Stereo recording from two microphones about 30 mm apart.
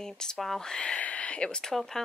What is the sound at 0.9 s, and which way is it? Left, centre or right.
Speech, left.